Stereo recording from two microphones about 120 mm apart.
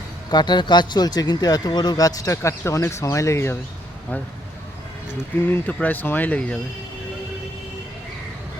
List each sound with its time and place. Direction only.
0.3 s a man's voice: 35° left (ahead or behind); by 3.6 s 20° left (ahead or behind)
5.5 s speech: 15° left (ahead or behind)